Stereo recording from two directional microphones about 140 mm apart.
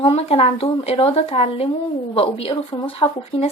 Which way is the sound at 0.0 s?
45° left (ahead or behind).